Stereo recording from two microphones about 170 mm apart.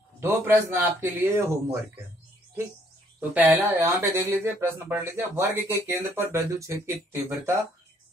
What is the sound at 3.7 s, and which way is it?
Speech, 15° right (ahead or behind).